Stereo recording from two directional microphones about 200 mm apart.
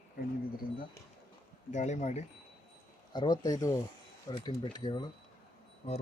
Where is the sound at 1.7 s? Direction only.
35° left (ahead or behind).